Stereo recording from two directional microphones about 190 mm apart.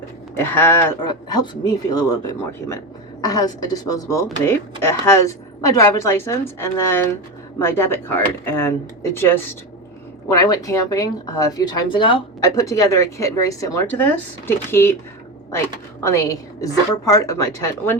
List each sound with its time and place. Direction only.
0.3 s speech: 10° left (ahead or behind)
1.0 s a woman's voice: 20° left (ahead or behind)
16.0 s speech: 15° left (ahead or behind)